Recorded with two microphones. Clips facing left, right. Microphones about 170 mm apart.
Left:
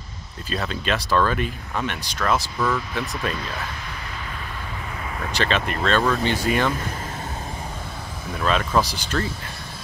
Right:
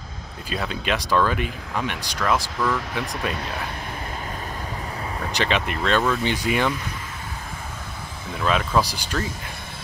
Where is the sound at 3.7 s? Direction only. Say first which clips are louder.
Right 3 dB; 50° right (ahead or behind); by 5.2 s 35° right (ahead or behind).